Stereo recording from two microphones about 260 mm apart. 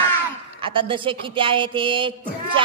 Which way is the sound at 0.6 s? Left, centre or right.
Centre.